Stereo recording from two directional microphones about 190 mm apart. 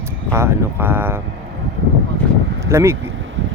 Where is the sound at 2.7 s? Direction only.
15° right (ahead or behind).